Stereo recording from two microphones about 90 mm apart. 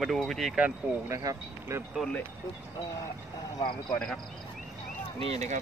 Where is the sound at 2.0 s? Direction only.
5° right (ahead or behind).